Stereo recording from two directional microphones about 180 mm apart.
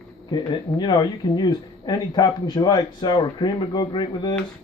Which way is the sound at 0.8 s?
25° left (ahead or behind).